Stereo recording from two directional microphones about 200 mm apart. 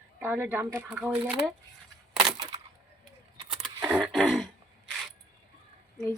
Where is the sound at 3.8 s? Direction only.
5° right (ahead or behind).